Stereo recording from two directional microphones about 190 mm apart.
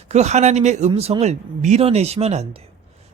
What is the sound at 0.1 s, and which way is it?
Speech, 35° right (ahead or behind).